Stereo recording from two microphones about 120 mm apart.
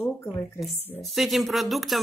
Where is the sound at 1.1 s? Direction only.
Centre (ahead or behind).